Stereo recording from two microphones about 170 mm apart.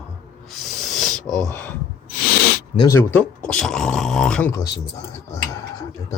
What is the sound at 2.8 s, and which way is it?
Speech, 15° left (ahead or behind).